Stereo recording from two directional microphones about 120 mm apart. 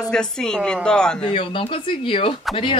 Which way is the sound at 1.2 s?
50° left (ahead or behind).